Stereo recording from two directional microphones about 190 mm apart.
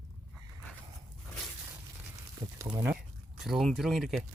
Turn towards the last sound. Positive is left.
turn(degrees=0)  # may be behind; listen again after turning